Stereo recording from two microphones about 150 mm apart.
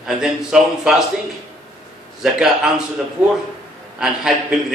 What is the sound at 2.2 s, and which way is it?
Speech, 5° right (ahead or behind).